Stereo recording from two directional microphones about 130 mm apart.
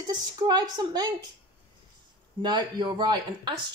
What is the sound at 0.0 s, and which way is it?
Speech, 30° right (ahead or behind).